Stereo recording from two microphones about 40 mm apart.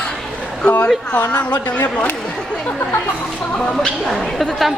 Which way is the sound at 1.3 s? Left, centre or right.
Left.